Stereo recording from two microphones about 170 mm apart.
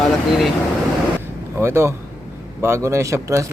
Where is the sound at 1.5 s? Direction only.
15° right (ahead or behind).